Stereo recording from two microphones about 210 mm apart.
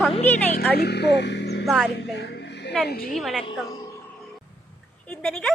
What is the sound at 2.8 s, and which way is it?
Speech, 45° left (ahead or behind).